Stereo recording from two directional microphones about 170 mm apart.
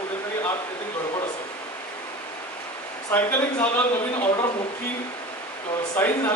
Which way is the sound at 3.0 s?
10° left (ahead or behind).